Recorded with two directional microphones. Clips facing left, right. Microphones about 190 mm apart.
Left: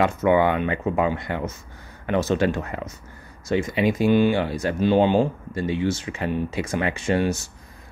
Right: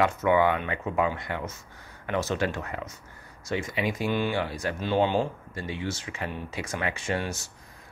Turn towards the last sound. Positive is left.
turn(degrees=20)  # may be behind; listen again after turning